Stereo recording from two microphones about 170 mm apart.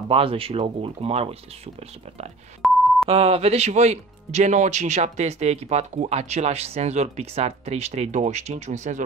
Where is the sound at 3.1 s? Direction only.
35° right (ahead or behind).